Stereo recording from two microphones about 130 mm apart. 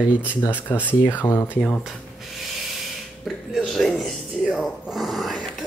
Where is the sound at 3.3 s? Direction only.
Centre (ahead or behind).